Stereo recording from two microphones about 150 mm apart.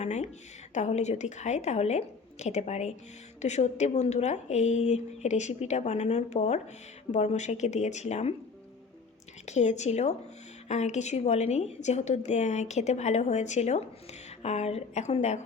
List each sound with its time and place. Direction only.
0.0 s a woman's voice: 50° left (ahead or behind)
9.5 s a woman's voice: 50° left (ahead or behind)